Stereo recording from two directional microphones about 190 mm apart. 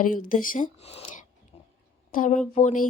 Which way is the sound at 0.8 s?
30° left (ahead or behind).